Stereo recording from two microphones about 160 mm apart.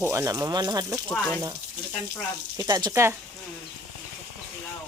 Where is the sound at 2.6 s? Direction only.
25° right (ahead or behind).